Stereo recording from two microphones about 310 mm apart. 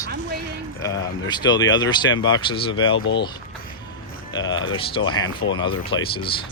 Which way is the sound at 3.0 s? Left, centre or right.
Left.